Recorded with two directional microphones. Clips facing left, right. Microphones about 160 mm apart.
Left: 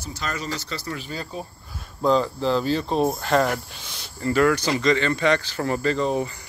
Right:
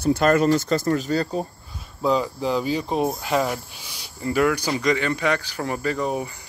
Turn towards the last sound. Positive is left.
turn(degrees=-10)  # may be behind; listen again after turning